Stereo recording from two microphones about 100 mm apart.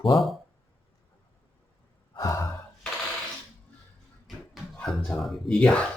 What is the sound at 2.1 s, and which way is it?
Gasp, 30° left (ahead or behind).